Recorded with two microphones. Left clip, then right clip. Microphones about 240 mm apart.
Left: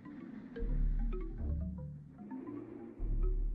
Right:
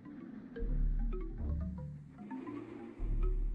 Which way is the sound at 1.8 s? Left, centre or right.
Right.